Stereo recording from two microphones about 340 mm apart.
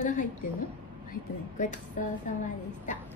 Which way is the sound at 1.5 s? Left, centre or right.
Left.